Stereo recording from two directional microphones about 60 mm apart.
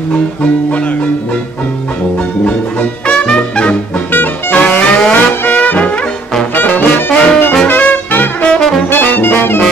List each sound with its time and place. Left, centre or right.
2.4 s music: centre
4.1 s music: left
4.6 s brass instrument: centre
5.4 s music: left
6.5 s brass instrument: left
7.6 s music: left
8.5 s brass instrument: centre
8.9 s music: left